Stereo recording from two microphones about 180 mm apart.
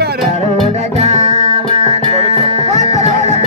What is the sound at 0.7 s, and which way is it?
Music, 35° right (ahead or behind).